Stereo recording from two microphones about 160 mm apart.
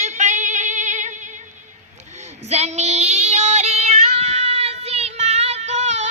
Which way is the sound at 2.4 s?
45° right (ahead or behind).